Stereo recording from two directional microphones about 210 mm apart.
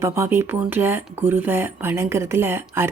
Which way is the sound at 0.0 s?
10° right (ahead or behind).